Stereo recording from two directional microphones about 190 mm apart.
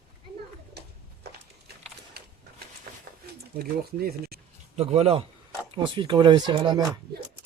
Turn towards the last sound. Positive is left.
turn(degrees=-25)  # may be behind; listen again after turning